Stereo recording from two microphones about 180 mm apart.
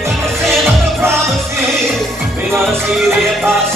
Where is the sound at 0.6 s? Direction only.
15° right (ahead or behind).